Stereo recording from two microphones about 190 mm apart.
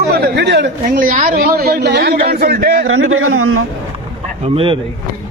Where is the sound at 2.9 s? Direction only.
90° right.